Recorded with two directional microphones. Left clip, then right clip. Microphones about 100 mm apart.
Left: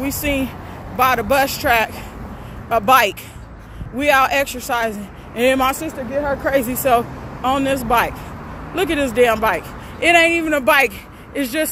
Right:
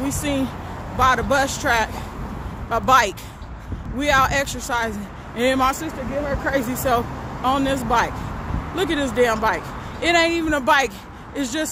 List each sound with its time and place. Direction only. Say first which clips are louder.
0.0 s speech: left 3 dB; 10° left (ahead or behind)